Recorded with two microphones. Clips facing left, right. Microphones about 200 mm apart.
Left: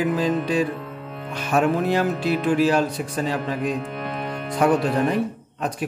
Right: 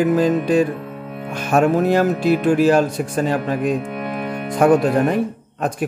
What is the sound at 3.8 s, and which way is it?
Music, 10° right (ahead or behind).